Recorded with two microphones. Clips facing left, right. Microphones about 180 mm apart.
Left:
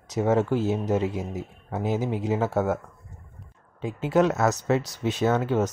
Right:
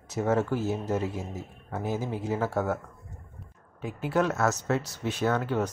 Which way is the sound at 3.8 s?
20° left (ahead or behind).